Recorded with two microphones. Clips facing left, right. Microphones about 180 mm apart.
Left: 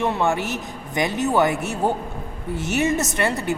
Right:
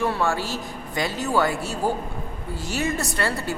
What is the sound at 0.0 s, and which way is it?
A woman's voice, 20° left (ahead or behind).